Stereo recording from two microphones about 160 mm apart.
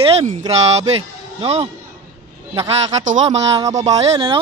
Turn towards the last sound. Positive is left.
turn(degrees=-30)  # may be behind; listen again after turning